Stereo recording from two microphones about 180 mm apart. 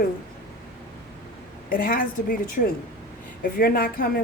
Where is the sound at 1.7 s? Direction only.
55° left (ahead or behind).